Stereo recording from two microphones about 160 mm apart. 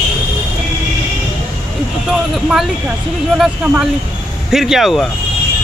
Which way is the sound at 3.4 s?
5° right (ahead or behind).